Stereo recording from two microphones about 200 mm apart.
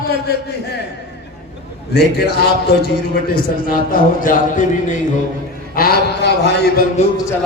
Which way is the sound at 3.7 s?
45° left (ahead or behind).